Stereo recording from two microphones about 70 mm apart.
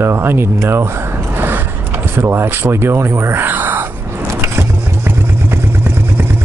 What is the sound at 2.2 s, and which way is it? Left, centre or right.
Speech, right.